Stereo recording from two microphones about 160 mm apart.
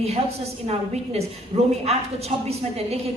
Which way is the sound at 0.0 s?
40° right (ahead or behind).